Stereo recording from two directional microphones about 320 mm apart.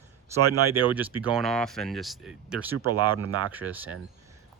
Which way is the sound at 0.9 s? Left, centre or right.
Centre.